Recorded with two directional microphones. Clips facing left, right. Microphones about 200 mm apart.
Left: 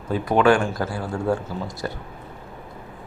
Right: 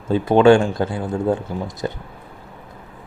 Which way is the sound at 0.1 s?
25° right (ahead or behind).